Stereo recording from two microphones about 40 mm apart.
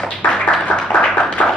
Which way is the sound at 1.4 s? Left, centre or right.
Left.